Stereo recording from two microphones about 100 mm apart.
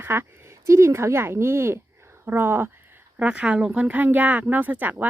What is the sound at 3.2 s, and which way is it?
Speech, 10° right (ahead or behind).